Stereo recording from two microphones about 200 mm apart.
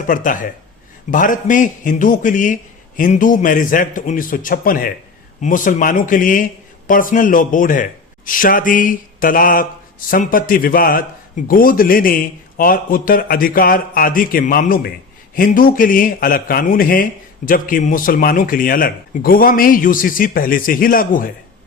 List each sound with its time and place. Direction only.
0.1 s a man's voice: 40° left (ahead or behind)